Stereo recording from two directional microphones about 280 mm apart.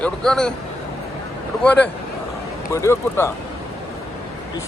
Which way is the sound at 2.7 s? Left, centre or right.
Centre.